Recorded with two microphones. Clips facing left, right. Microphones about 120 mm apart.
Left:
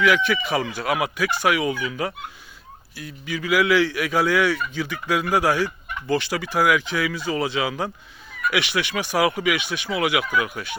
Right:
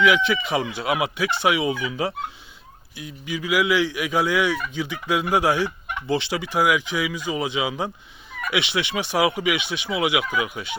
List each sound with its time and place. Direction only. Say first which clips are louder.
0.0 s speech: right 1 dB; 25° right (ahead or behind)